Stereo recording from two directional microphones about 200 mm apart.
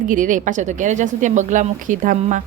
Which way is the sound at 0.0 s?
40° right (ahead or behind).